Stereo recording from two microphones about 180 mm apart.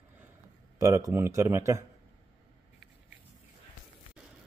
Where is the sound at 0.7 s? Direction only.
15° right (ahead or behind).